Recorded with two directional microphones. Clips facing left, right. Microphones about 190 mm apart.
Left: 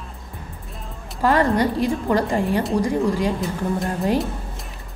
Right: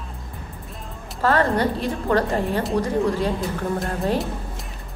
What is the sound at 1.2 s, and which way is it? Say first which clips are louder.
A woman's voice: left 2 dB; 15° left (ahead or behind).